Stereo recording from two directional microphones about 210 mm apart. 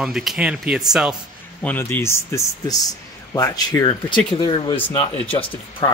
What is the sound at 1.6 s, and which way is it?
Speech, 10° left (ahead or behind).